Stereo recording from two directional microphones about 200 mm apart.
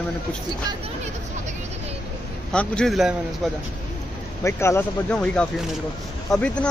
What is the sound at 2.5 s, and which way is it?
Speech, 5° left (ahead or behind).